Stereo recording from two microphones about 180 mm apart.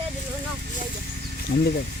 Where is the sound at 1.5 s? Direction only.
60° left (ahead or behind).